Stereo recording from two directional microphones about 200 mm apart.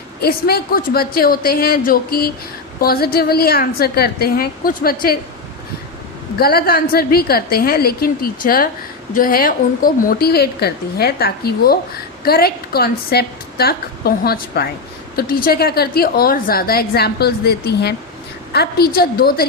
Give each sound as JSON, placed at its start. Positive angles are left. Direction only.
{"t": 0.2, "sound": "a woman's voice", "side_deg": 50}
{"t": 6.3, "sound": "a woman's voice", "side_deg": 50}